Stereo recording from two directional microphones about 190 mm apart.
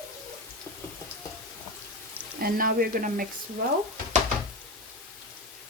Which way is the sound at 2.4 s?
50° right (ahead or behind).